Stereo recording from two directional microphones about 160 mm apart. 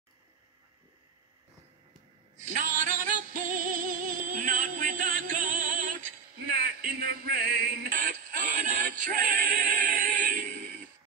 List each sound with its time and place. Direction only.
2.3 s music: 50° right (ahead or behind)
6.4 s male singing: 70° right (ahead or behind)
8.9 s music: 55° right (ahead or behind)